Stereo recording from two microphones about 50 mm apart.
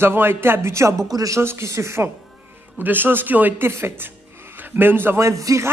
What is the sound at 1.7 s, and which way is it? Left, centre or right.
Speech, right.